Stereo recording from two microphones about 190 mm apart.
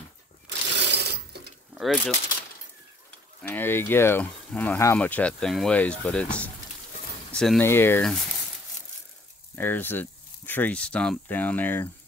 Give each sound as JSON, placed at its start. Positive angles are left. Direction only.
{"t": 0.5, "sound": "a sound", "side_deg": -65}
{"t": 1.8, "sound": "speech", "side_deg": 0}
{"t": 3.4, "sound": "speech", "side_deg": 10}
{"t": 9.6, "sound": "speech", "side_deg": 10}